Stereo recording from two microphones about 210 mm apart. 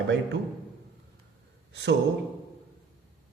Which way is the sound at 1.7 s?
55° right (ahead or behind).